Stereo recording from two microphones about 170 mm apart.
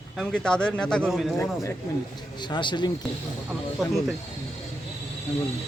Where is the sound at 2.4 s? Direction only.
25° left (ahead or behind).